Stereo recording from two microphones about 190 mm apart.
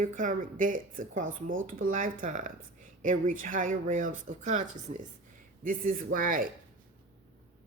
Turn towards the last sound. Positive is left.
turn(degrees=-45)  # may be behind; listen again after turning